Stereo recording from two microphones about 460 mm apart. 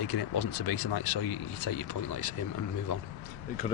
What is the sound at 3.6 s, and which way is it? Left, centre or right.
Speech, centre.